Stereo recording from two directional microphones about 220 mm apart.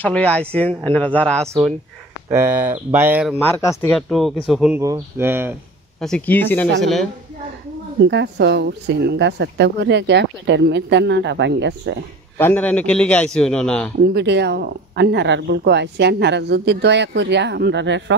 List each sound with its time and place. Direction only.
0.0 s a man's voice: 5° left (ahead or behind)
2.2 s speech: 15° right (ahead or behind)
3.3 s a man's voice: 10° left (ahead or behind); by 5.6 s 10° right (ahead or behind)
5.9 s a man's voice: 5° left (ahead or behind)
8.0 s speech: 50° right (ahead or behind)
12.4 s a man's voice: 10° left (ahead or behind)
14.0 s speech: 50° right (ahead or behind)